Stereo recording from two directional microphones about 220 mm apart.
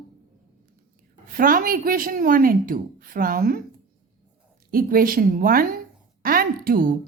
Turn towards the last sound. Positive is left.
turn(degrees=-40)  # may be behind; listen again after turning